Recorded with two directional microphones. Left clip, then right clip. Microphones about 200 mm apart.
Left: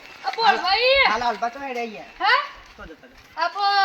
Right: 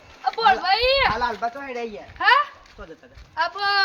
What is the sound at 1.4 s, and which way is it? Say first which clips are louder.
Speech: left 1 dB; 25° right (ahead or behind).